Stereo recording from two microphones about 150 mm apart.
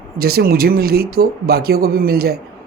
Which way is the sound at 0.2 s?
90° right.